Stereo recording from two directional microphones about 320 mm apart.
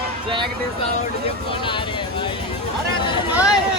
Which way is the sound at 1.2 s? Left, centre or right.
Centre.